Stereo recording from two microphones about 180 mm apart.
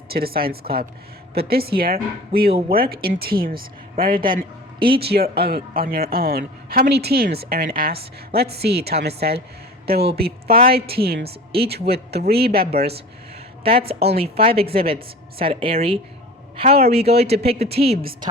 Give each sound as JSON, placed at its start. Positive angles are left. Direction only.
{"t": 0.1, "sound": "speech", "side_deg": -55}
{"t": 13.7, "sound": "speech", "side_deg": -30}
{"t": 17.7, "sound": "speech", "side_deg": -60}